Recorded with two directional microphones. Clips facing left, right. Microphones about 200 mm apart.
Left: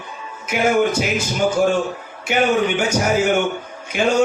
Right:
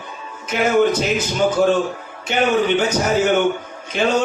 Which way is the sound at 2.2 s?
10° left (ahead or behind).